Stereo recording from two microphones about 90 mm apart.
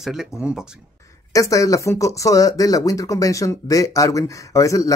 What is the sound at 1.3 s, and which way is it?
Speech, 35° left (ahead or behind).